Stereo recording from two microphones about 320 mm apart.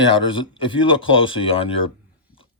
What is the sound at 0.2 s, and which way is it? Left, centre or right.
Speech, centre.